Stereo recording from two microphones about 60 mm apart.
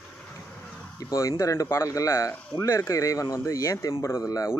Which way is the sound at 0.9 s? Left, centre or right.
Left.